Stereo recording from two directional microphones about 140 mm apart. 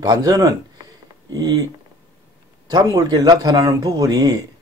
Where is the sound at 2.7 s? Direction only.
30° right (ahead or behind).